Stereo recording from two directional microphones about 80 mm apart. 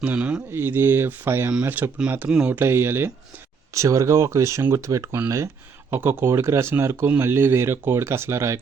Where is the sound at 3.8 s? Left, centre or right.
Right.